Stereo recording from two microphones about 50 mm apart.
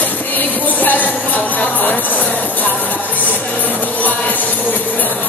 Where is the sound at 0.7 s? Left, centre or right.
Left.